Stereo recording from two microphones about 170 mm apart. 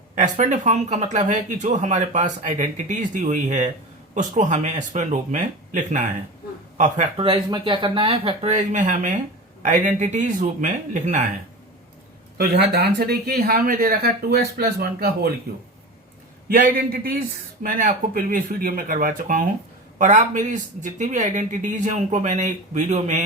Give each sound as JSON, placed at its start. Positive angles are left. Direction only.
{"t": 0.2, "sound": "speech", "side_deg": -45}
{"t": 12.4, "sound": "speech", "side_deg": -70}
{"t": 16.5, "sound": "speech", "side_deg": -55}